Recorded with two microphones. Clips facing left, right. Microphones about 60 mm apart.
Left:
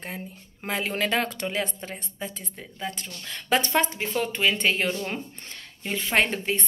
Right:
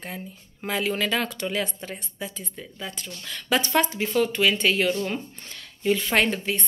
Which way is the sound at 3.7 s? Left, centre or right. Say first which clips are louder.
Right 2 dB; left.